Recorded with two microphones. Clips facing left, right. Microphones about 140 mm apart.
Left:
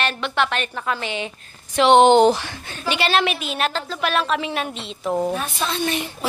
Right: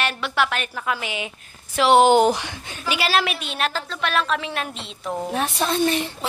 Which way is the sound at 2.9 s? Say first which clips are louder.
Left 2 dB; 5° right (ahead or behind).